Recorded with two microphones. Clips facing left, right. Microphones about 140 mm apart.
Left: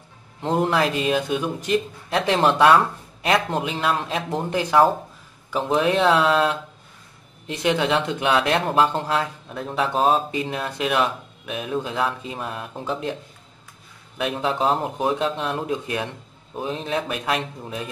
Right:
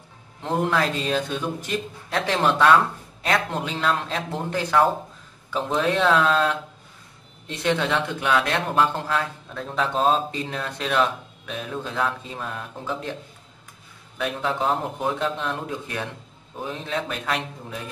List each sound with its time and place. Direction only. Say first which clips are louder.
0.4 s speech: left 2 dB; 20° left (ahead or behind)
14.1 s speech: left 2 dB; 15° left (ahead or behind)